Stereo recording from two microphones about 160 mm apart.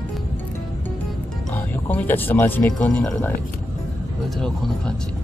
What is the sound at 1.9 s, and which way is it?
Speech, 10° left (ahead or behind).